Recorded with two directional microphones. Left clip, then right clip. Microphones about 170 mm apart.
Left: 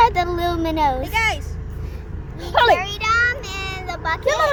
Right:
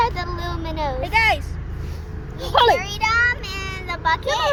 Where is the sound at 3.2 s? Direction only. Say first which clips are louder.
Even; 55° left (ahead or behind).